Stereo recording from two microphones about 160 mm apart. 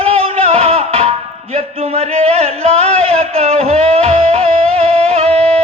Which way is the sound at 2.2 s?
40° right (ahead or behind).